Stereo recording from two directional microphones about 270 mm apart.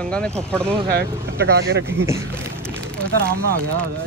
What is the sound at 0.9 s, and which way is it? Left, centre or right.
Speech, right.